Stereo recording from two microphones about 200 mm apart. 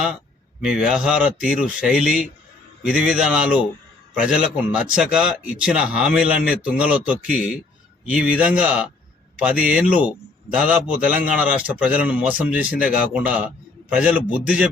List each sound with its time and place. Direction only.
0.6 s a man's voice: 5° right (ahead or behind)